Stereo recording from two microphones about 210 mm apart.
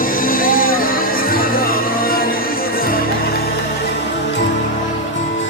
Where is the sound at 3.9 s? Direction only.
55° left (ahead or behind).